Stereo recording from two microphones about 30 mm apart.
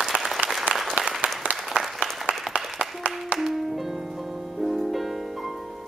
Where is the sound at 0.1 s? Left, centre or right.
Right.